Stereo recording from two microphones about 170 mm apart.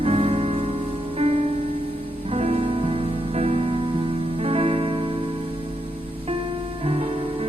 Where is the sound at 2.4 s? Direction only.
35° right (ahead or behind).